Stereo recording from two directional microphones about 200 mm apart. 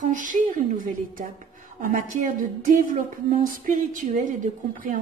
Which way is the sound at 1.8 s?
40° right (ahead or behind).